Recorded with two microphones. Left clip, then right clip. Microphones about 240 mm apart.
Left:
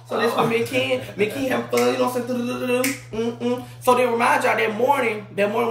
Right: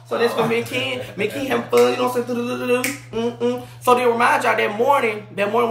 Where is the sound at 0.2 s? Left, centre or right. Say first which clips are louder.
Right 1 dB; centre.